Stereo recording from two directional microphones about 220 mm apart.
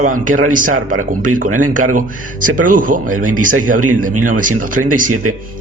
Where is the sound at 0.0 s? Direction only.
35° right (ahead or behind).